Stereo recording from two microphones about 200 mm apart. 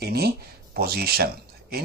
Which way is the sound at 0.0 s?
50° right (ahead or behind).